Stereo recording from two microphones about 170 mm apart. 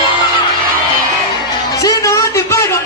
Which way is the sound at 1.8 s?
20° left (ahead or behind).